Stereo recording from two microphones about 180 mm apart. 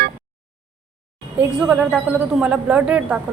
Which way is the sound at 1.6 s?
5° right (ahead or behind).